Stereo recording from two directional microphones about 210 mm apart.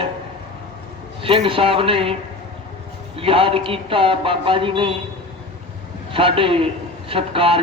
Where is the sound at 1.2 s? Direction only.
25° right (ahead or behind).